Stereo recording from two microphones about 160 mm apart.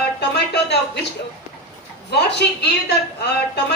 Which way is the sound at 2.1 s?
90° left.